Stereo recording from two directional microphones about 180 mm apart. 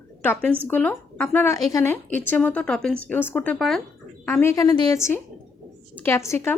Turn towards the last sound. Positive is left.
turn(degrees=15)  # may be behind; listen again after turning